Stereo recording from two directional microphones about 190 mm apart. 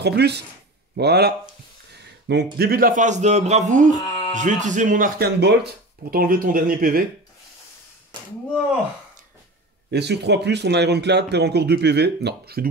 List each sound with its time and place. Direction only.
0.0 s a man's voice: 60° right (ahead or behind); by 3.9 s 40° right (ahead or behind)
4.1 s a sound: 25° left (ahead or behind)
4.4 s a man's voice: 40° right (ahead or behind)
5.4 s speech: 60° right (ahead or behind)
8.1 s a sound: 25° right (ahead or behind)
9.8 s speech: 65° right (ahead or behind)